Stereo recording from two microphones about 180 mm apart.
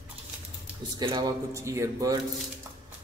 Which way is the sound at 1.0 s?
25° right (ahead or behind).